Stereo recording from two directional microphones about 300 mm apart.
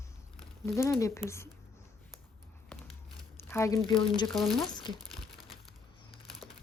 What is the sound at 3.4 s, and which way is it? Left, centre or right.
Speech, centre.